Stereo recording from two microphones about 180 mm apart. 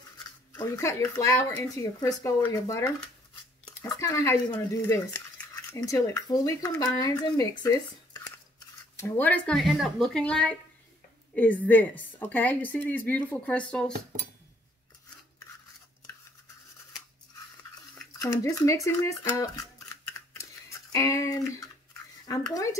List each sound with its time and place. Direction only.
0.5 s a woman's voice: 15° left (ahead or behind)
18.2 s a woman's voice: 20° left (ahead or behind)
20.9 s a woman's voice: 15° left (ahead or behind)